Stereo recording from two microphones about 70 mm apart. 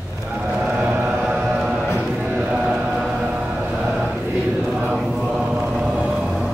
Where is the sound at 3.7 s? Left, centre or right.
Centre.